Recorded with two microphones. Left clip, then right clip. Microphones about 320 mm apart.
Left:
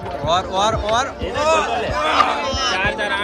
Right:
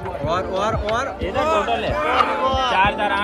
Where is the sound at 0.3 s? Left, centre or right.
Centre.